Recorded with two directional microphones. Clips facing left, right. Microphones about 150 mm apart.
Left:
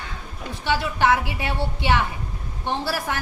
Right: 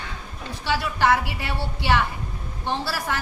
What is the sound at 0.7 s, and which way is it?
A woman's voice, 20° left (ahead or behind).